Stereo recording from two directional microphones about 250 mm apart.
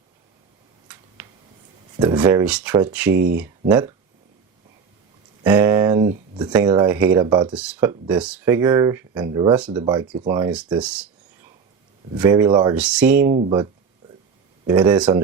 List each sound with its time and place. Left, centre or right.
0.9 s a sound: centre
2.0 s speech: centre
5.5 s a sound: centre
6.7 s speech: centre
7.5 s speech: centre
9.8 s speech: centre
12.1 s speech: centre
12.7 s speech: centre
14.7 s speech: centre